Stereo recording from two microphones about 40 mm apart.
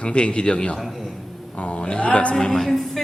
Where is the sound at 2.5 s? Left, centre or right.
Centre.